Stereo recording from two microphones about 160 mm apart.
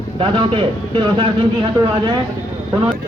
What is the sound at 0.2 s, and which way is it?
A man's voice, 30° right (ahead or behind).